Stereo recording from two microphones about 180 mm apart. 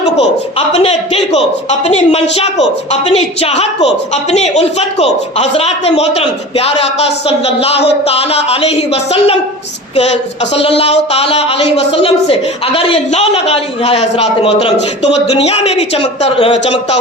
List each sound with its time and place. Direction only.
0.7 s a woman's voice: 35° left (ahead or behind)
10.8 s a woman's voice: 35° left (ahead or behind)